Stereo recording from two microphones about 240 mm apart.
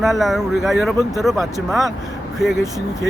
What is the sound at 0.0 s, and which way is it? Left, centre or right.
Speech, centre.